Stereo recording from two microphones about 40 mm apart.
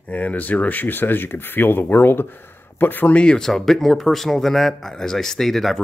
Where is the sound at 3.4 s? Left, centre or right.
Centre.